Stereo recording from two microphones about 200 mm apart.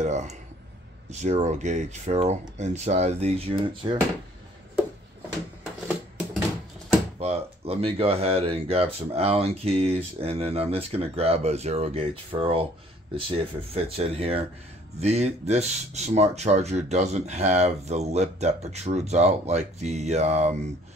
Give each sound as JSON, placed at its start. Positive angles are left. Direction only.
{"t": 0.0, "sound": "speech", "side_deg": -35}
{"t": 5.9, "sound": "music", "side_deg": 0}
{"t": 7.2, "sound": "speech", "side_deg": -30}
{"t": 13.7, "sound": "speech", "side_deg": -30}